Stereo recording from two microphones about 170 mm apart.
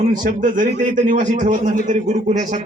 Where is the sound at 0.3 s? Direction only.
50° right (ahead or behind).